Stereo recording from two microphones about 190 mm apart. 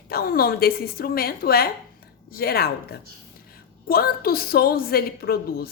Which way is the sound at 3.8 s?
50° left (ahead or behind).